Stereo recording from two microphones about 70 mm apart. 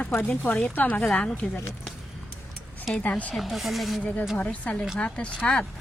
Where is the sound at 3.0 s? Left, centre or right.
Left.